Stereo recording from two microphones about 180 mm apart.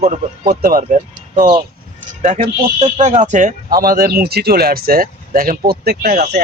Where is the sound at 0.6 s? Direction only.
50° right (ahead or behind).